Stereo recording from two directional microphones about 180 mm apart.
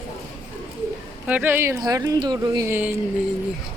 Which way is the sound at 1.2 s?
10° right (ahead or behind).